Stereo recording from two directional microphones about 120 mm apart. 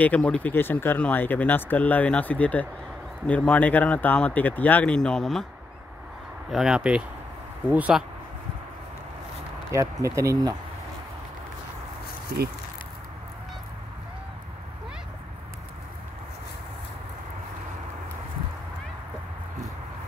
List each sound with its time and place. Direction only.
0.0 s speech: 10° left (ahead or behind)
6.5 s speech: 5° right (ahead or behind)
9.7 s speech: 25° right (ahead or behind)